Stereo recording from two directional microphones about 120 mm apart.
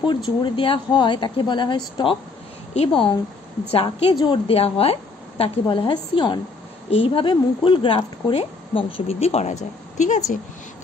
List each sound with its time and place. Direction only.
0.0 s speech: 40° left (ahead or behind)
2.7 s speech: 50° left (ahead or behind)
6.9 s speech: 50° left (ahead or behind)
9.9 s a woman's voice: 80° left